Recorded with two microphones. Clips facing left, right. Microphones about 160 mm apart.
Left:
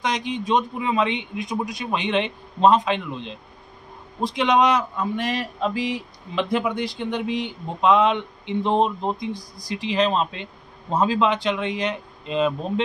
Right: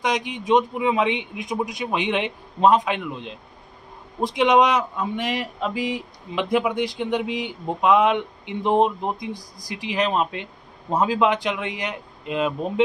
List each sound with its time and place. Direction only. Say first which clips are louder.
0.0 s speech: even; 15° right (ahead or behind)